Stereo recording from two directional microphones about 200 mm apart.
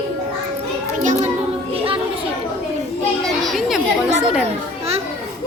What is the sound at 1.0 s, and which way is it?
Speech, 40° right (ahead or behind).